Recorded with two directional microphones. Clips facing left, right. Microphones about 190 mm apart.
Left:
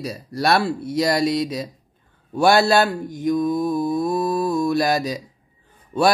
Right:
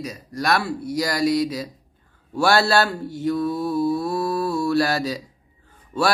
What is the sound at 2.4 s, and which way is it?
Mantra, 20° left (ahead or behind).